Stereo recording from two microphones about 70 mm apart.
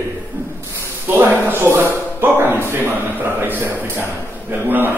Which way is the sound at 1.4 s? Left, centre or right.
Right.